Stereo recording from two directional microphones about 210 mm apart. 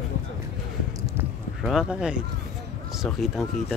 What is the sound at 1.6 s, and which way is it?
Speech, centre (ahead or behind).